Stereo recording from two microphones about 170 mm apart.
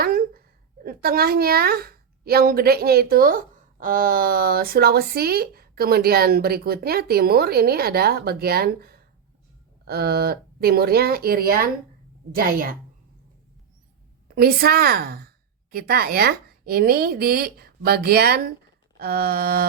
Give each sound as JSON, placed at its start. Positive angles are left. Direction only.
{"t": 0.0, "sound": "a sound", "side_deg": -60}
{"t": 0.9, "sound": "a woman's voice", "side_deg": -65}
{"t": 14.3, "sound": "a woman's voice", "side_deg": -65}